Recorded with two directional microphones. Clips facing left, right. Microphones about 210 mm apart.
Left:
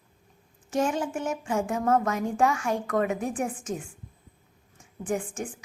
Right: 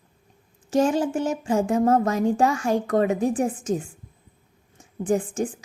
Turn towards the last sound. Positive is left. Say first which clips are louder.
# right 7 dB
turn(degrees=-35)  # may be behind; listen again after turning